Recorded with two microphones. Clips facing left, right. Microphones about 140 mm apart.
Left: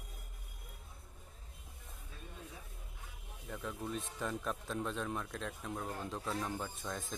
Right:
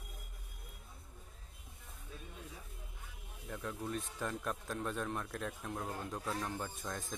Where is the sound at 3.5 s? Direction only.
Centre (ahead or behind).